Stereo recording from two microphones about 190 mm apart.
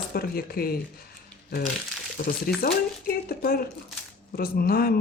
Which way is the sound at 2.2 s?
50° left (ahead or behind).